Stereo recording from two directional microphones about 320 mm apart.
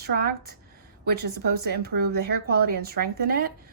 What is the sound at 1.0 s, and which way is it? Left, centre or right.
A woman's voice, right.